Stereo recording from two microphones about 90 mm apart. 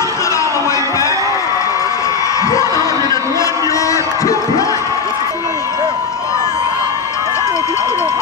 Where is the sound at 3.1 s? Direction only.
35° left (ahead or behind).